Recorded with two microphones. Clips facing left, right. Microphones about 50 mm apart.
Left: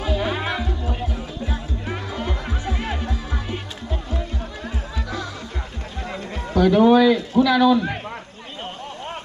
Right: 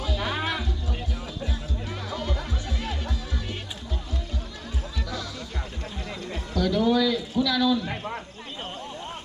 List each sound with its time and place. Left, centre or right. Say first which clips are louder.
0.0 s music: left 5 dB; left
6.1 s a man's voice: left 7 dB; left
7.9 s a sound: left 3 dB; centre